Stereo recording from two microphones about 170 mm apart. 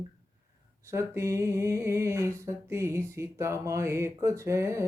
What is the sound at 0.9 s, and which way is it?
Speech, 15° right (ahead or behind).